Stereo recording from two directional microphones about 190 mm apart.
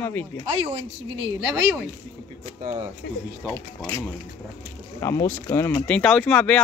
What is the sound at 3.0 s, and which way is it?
Speech, 65° left (ahead or behind).